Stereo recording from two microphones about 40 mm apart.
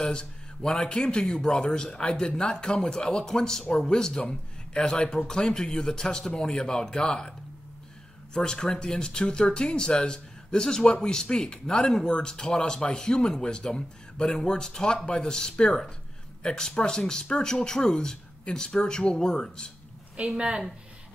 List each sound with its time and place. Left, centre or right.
0.0 s a man's voice: centre
20.3 s a woman's voice: right